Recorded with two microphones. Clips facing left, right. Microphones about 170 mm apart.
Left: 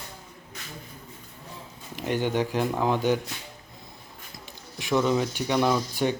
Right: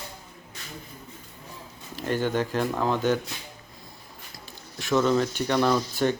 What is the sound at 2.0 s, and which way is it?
Speech, 15° left (ahead or behind).